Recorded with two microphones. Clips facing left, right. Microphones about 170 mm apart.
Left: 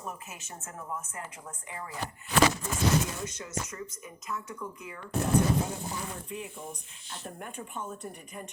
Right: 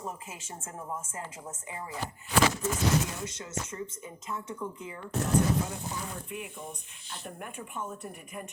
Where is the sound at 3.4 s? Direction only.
25° right (ahead or behind).